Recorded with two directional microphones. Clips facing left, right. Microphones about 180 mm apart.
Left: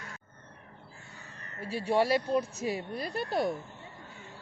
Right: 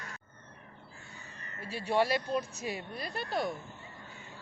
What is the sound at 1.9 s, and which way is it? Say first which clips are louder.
Speech: left 3 dB; 35° left (ahead or behind).